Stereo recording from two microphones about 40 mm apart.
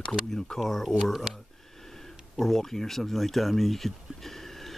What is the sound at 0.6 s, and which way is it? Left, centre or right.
Speech, centre.